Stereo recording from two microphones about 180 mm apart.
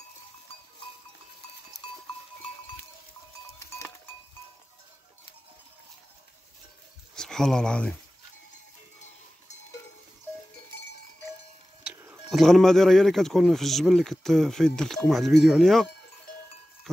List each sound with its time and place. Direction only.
3.5 s goat: 15° left (ahead or behind)
7.2 s speech: 5° left (ahead or behind)
11.9 s music: 15° right (ahead or behind)
12.3 s speech: centre (ahead or behind)
16.9 s a sound: centre (ahead or behind)